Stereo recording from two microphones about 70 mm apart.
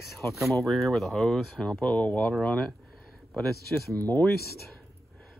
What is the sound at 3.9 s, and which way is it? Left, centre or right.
Speech, left.